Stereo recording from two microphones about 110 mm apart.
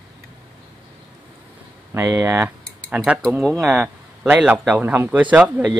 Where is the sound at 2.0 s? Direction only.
15° right (ahead or behind).